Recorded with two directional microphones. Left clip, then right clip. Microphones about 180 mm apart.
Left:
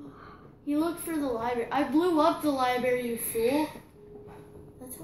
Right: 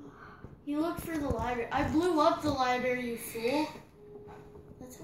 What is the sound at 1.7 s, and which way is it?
A woman's voice, 30° left (ahead or behind).